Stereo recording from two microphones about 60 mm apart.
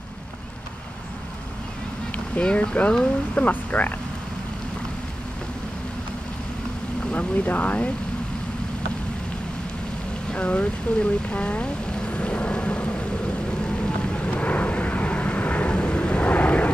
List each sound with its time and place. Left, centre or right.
2.1 s speech: left
7.1 s speech: left
10.3 s a sound: centre
14.1 s vehicle: left